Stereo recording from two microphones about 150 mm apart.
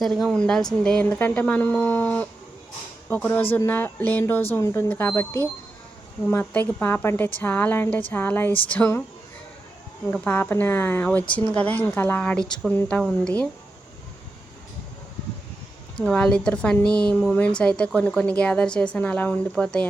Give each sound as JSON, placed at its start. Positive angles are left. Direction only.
{"t": 0.0, "sound": "a woman's voice", "side_deg": 0}
{"t": 3.5, "sound": "a woman's voice", "side_deg": 15}
{"t": 10.1, "sound": "a woman's voice", "side_deg": 10}
{"t": 16.0, "sound": "a woman's voice", "side_deg": 5}